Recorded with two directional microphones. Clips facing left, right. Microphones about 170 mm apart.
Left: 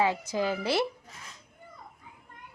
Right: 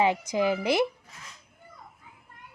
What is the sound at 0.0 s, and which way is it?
Speech, 15° right (ahead or behind).